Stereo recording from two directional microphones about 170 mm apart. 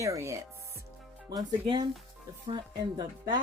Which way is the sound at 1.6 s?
30° right (ahead or behind).